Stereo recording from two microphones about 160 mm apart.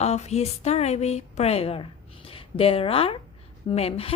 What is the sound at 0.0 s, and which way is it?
A woman's voice, 45° left (ahead or behind).